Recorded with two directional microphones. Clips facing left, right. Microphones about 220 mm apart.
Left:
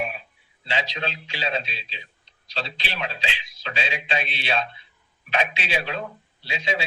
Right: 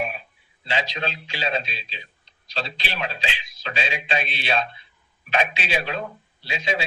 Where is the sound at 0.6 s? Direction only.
45° right (ahead or behind).